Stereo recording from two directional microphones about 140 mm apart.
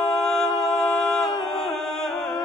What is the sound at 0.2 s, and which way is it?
A capella, 5° left (ahead or behind).